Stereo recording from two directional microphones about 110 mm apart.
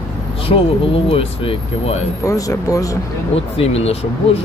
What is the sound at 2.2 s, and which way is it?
Speech, 30° left (ahead or behind).